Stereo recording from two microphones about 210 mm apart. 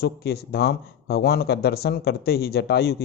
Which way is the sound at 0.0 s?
50° left (ahead or behind).